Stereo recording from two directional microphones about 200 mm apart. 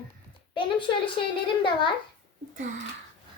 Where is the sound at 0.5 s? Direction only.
25° left (ahead or behind).